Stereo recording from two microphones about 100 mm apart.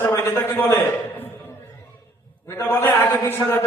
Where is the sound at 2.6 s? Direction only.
20° left (ahead or behind).